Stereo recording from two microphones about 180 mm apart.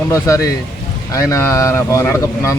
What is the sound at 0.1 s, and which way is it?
Speech, 15° left (ahead or behind).